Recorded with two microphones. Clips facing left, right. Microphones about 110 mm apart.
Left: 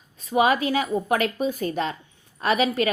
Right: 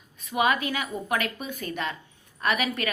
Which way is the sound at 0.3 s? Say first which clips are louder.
Left 4 dB; 35° left (ahead or behind).